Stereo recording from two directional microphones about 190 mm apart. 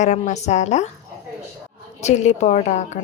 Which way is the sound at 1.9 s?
35° left (ahead or behind).